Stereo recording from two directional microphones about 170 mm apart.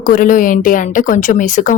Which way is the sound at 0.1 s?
50° left (ahead or behind).